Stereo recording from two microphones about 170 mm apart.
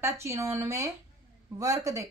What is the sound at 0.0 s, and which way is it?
Speech, 15° right (ahead or behind).